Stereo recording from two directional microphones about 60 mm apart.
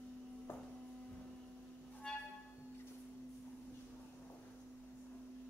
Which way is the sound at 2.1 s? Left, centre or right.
Centre.